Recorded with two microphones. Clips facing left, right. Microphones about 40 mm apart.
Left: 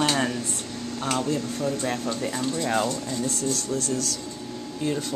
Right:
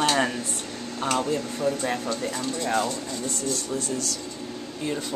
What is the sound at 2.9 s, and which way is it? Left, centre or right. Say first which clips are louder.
Speech: left 2 dB; centre.